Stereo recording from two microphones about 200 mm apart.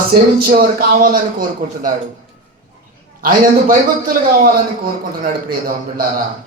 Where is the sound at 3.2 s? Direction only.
45° right (ahead or behind).